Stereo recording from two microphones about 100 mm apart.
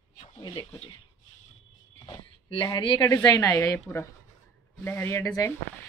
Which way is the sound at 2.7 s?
55° left (ahead or behind).